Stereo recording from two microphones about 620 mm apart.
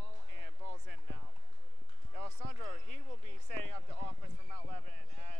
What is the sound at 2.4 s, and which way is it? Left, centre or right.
Basketball bounce, right.